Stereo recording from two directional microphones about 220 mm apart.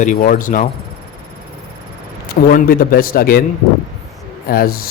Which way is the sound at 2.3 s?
40° left (ahead or behind).